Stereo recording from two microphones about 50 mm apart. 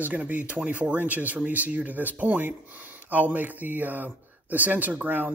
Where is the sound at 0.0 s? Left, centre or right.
Right.